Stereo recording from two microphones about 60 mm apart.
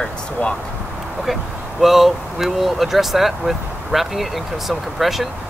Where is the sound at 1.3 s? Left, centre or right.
Centre.